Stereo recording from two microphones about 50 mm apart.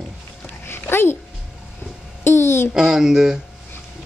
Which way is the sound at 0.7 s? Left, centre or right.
Left.